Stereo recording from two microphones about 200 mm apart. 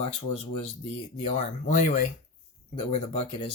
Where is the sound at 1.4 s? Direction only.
40° left (ahead or behind).